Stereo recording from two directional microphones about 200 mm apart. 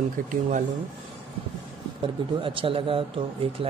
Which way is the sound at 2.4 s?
25° right (ahead or behind).